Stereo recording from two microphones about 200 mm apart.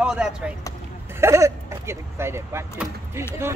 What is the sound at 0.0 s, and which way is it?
Speech, 5° right (ahead or behind).